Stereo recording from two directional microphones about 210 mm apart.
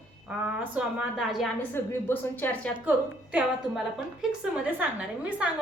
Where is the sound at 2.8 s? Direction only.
5° right (ahead or behind).